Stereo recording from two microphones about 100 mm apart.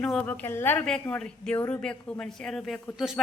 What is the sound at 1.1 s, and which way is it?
A woman's voice, 5° left (ahead or behind).